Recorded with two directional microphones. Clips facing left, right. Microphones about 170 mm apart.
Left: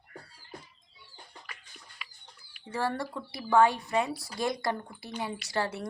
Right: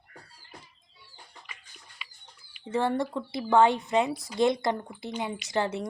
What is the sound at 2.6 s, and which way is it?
Speech, 20° right (ahead or behind).